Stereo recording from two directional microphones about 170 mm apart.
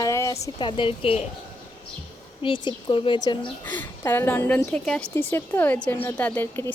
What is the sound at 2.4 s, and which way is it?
A woman's voice, 30° left (ahead or behind).